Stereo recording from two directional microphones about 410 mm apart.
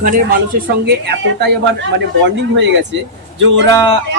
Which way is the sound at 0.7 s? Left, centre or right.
Right.